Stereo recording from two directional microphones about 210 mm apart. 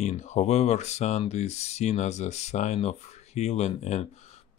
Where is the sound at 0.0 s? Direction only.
30° left (ahead or behind).